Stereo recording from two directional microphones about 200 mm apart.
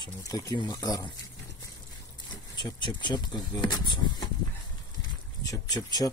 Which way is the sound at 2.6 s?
25° left (ahead or behind).